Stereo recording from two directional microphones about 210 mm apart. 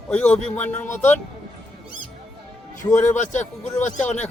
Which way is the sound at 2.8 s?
15° left (ahead or behind).